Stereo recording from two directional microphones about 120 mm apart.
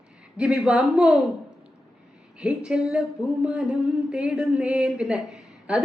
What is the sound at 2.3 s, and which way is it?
A woman's voice, 5° right (ahead or behind).